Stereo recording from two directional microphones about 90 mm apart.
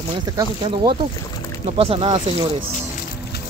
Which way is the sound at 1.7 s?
90° right.